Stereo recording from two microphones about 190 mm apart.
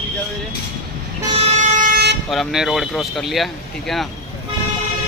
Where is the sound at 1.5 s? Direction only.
40° right (ahead or behind).